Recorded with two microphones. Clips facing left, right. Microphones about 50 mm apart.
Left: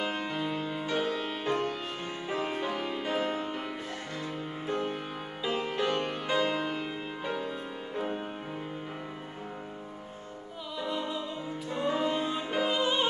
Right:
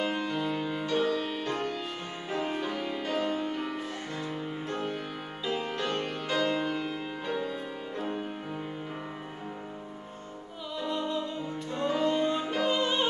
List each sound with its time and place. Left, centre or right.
0.0 s music: centre
0.8 s music: centre
5.4 s music: centre
10.8 s music: centre